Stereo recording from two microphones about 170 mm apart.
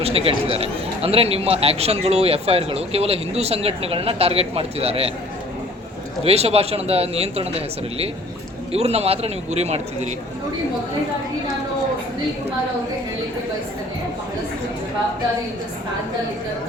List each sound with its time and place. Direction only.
0.0 s speech: 35° right (ahead or behind)
6.2 s speech: 35° right (ahead or behind)
8.7 s speech: 35° right (ahead or behind)